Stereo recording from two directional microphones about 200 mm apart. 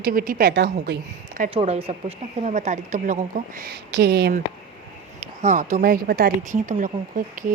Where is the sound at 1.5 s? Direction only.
30° right (ahead or behind); by 4.4 s 55° right (ahead or behind).